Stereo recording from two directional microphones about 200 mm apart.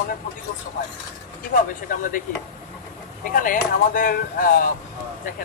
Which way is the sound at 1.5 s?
45° left (ahead or behind).